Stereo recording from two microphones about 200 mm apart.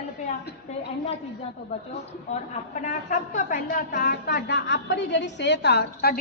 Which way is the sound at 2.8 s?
40° left (ahead or behind).